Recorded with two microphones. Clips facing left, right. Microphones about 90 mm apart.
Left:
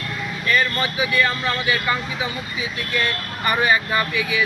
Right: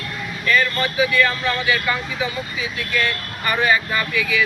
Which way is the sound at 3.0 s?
20° left (ahead or behind).